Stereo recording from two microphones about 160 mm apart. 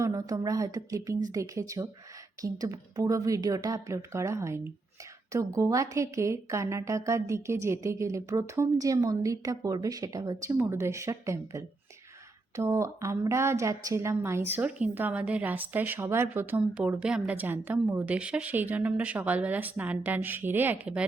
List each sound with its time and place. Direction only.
0.0 s a woman's voice: 20° right (ahead or behind); by 21.1 s 5° right (ahead or behind)